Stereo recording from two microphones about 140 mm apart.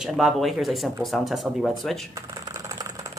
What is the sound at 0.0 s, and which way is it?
Speech, centre (ahead or behind).